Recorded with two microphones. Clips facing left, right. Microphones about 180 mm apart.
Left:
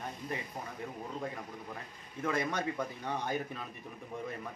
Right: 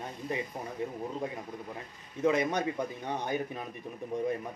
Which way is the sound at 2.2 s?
20° right (ahead or behind).